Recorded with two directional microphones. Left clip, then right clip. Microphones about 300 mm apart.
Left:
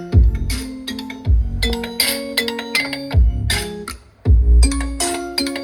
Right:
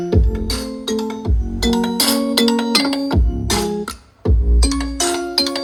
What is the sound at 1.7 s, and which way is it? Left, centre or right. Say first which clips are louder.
Music: right 4 dB; right.